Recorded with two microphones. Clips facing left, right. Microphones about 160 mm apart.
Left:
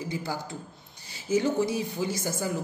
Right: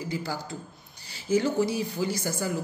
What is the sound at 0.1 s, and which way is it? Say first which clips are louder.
A woman's voice: even; 20° left (ahead or behind).